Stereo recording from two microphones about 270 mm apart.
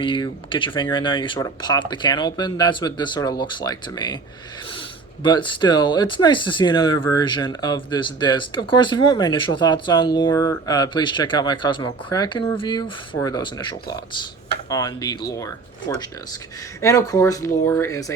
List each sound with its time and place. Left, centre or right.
0.0 s speech: centre
16.8 s speech: centre